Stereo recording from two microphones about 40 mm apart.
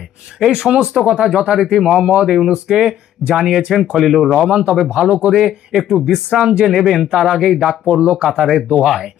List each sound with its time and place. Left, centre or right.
0.3 s speech: centre
4.9 s speech: right
6.3 s speech: right
6.7 s speech: centre
7.9 s speech: right
8.2 s speech: centre